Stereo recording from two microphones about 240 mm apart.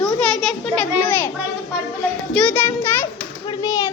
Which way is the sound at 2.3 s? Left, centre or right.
Centre.